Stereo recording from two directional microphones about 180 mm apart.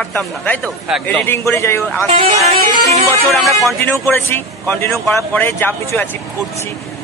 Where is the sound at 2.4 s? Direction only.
35° right (ahead or behind).